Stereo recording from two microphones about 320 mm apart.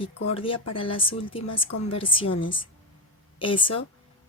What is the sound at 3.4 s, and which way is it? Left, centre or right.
Speech, centre.